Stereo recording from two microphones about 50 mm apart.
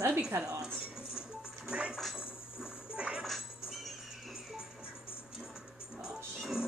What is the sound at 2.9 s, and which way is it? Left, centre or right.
Speech, centre.